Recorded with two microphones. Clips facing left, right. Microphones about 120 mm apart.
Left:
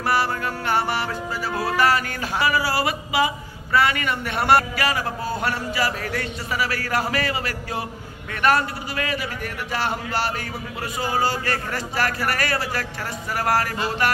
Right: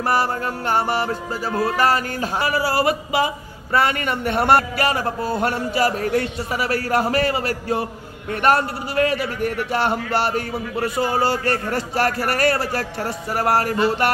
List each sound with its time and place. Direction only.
0.1 s a man's voice: 45° right (ahead or behind)
13.0 s speech: 35° right (ahead or behind)